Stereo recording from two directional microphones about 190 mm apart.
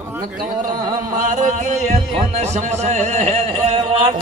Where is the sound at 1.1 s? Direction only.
40° right (ahead or behind).